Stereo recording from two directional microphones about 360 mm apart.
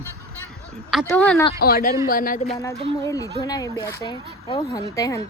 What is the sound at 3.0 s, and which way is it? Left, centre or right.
Speech, centre.